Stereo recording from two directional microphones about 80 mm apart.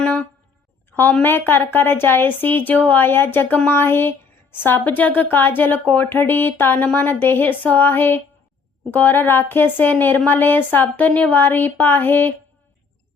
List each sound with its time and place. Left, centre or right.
1.2 s a woman's voice: left